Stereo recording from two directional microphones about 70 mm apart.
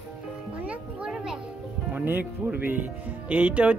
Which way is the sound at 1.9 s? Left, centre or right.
Right.